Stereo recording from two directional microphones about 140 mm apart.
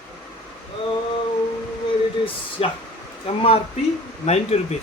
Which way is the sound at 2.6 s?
45° left (ahead or behind).